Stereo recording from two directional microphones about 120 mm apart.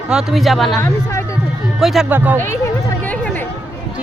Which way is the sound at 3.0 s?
15° left (ahead or behind).